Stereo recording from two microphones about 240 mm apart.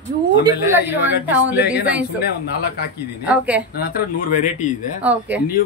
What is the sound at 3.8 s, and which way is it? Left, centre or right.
Speech, left.